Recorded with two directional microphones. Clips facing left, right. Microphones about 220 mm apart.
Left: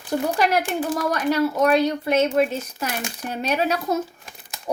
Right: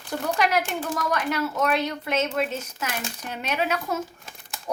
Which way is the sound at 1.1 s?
35° left (ahead or behind).